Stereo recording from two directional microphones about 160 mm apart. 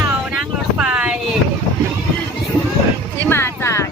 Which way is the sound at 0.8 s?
5° right (ahead or behind).